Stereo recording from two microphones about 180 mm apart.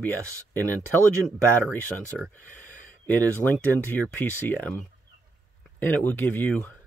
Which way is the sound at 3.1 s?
10° left (ahead or behind).